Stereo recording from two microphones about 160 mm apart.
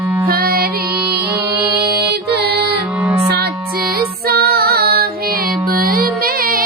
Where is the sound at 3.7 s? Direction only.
70° right (ahead or behind).